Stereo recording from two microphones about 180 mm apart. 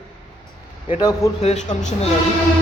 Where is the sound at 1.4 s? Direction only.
40° left (ahead or behind).